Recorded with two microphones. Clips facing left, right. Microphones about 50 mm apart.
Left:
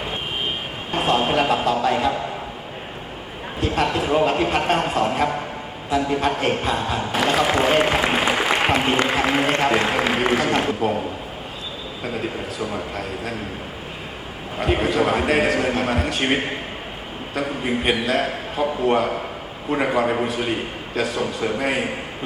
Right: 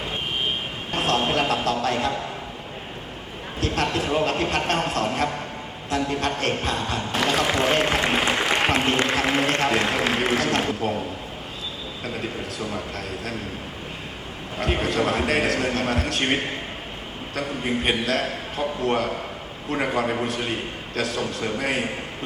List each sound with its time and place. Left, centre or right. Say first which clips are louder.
0.9 s a man's voice: left 3 dB; centre
3.6 s a man's voice: left 3 dB; centre
12.0 s a man's voice: left 4 dB; centre
14.6 s a man's voice: left 3 dB; centre